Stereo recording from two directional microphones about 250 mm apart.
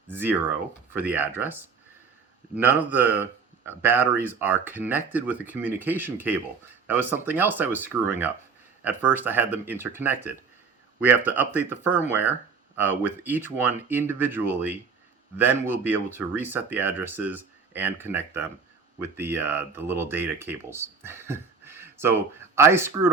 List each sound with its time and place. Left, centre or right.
0.1 s speech: centre